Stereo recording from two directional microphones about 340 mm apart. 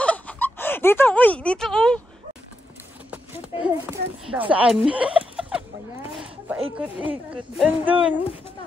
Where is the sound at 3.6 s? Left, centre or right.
Centre.